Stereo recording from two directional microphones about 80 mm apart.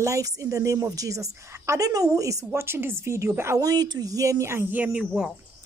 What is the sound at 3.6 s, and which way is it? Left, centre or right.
A woman's voice, right.